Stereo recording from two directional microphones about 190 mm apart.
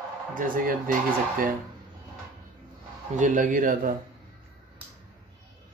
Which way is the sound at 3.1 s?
40° right (ahead or behind).